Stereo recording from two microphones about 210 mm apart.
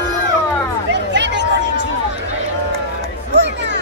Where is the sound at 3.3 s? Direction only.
55° right (ahead or behind).